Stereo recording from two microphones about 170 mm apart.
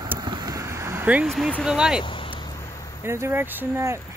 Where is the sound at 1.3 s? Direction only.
5° left (ahead or behind).